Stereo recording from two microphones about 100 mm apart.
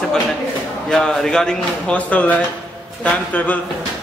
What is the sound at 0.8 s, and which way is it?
Speech, 5° left (ahead or behind).